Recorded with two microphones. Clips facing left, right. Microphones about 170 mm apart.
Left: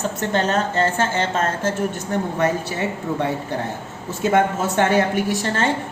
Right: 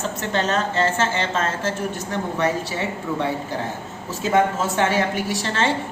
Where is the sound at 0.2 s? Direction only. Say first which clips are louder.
Left 2 dB; 50° left (ahead or behind).